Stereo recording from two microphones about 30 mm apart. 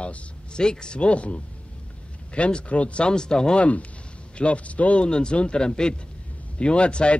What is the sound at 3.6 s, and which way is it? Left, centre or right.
Speech, left.